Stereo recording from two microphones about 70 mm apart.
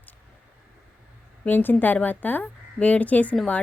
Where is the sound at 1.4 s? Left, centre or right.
Left.